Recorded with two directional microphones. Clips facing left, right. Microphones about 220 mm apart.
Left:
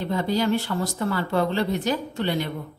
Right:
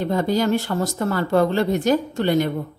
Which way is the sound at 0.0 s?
45° right (ahead or behind).